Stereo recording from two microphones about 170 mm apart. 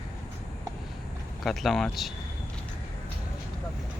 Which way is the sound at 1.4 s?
Centre (ahead or behind).